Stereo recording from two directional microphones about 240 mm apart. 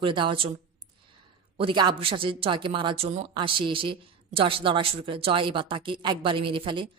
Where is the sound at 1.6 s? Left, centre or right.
Centre.